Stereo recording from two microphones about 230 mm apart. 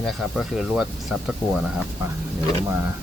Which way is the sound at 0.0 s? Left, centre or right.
Centre.